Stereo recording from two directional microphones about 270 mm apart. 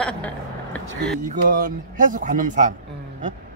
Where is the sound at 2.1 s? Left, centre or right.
Right.